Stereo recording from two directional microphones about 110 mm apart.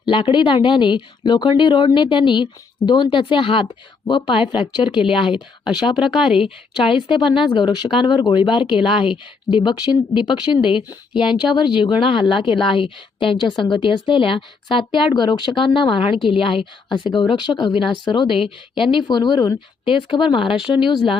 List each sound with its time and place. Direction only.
0.0 s a woman's voice: 50° left (ahead or behind)
6.0 s speech: 5° right (ahead or behind)
6.9 s a woman's voice: 50° left (ahead or behind)
18.3 s speech: 5° right (ahead or behind)
18.8 s a woman's voice: 45° left (ahead or behind)